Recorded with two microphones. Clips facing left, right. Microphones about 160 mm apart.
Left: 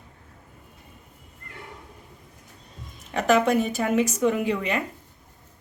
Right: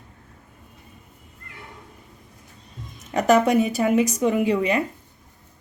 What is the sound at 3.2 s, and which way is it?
Speech, 40° right (ahead or behind).